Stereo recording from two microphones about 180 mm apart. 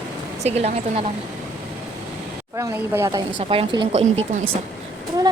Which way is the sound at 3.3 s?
30° right (ahead or behind).